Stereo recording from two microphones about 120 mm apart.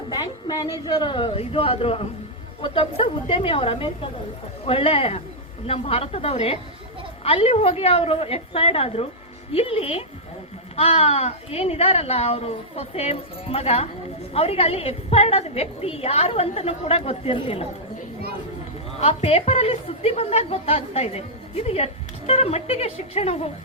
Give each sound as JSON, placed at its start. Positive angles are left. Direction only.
{"t": 0.1, "sound": "a woman's voice", "side_deg": 35}
{"t": 18.9, "sound": "a woman's voice", "side_deg": 55}